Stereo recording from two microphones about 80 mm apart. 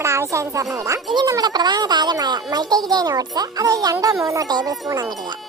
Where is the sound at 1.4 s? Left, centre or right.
Right.